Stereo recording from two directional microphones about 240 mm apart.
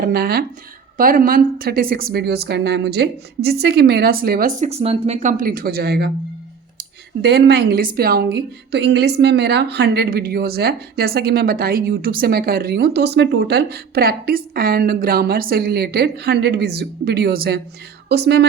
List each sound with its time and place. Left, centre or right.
0.0 s a woman's voice: right